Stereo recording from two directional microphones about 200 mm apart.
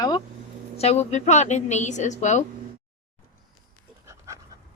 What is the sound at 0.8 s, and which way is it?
A woman's voice, 30° left (ahead or behind).